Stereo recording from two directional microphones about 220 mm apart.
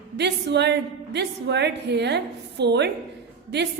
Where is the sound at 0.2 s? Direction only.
50° right (ahead or behind).